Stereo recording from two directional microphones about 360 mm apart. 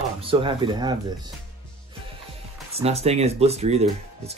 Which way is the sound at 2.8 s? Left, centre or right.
Centre.